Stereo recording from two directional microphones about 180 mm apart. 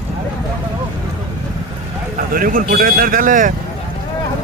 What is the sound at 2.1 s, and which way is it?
Speech, 50° right (ahead or behind).